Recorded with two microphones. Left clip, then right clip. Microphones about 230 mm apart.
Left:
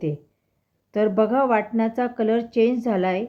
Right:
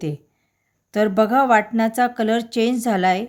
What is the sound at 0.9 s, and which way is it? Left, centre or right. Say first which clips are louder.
A woman's voice: right 3 dB; right.